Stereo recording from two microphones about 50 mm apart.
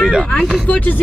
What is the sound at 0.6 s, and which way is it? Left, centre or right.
Speech, left.